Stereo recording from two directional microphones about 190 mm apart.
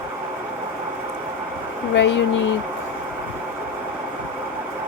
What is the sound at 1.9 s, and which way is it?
Speech, 75° left (ahead or behind).